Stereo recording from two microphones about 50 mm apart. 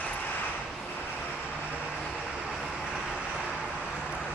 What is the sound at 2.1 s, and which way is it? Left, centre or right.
Vehicle, centre.